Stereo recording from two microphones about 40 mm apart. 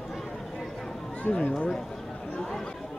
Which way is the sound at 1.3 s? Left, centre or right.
Left.